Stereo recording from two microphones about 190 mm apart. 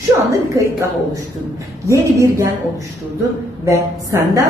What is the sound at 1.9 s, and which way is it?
Speech, 15° right (ahead or behind).